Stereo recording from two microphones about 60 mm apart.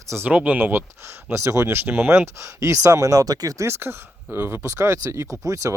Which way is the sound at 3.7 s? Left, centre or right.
Right.